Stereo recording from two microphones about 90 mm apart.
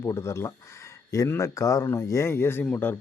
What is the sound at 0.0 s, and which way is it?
Speech, 30° left (ahead or behind).